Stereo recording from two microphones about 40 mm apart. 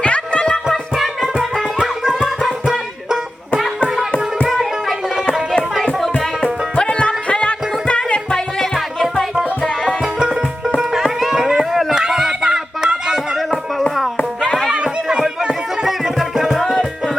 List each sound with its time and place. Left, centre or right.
0.0 s music: left
0.9 s music: centre
2.2 s music: centre
4.4 s music: centre
6.1 s music: left
8.3 s music: centre
10.0 s music: right
11.0 s a sound: centre
15.4 s music: right
16.1 s music: centre